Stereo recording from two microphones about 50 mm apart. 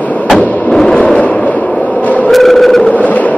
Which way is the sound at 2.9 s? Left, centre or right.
Left.